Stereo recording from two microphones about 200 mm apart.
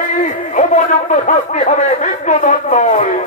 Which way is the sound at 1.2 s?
35° left (ahead or behind).